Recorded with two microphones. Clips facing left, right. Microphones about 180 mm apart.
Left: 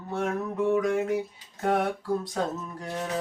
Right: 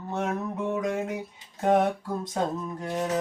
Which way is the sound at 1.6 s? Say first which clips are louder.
Right 3 dB; 20° right (ahead or behind).